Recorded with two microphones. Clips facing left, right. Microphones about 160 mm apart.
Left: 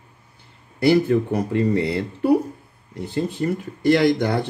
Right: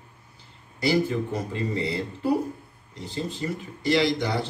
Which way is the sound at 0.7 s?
60° left (ahead or behind).